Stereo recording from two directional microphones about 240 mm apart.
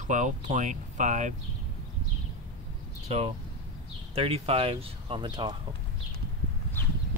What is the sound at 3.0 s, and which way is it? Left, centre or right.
Speech, right.